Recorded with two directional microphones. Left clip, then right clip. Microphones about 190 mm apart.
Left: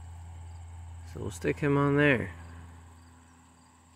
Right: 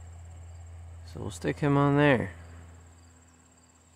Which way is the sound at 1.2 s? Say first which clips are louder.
Even; 15° right (ahead or behind).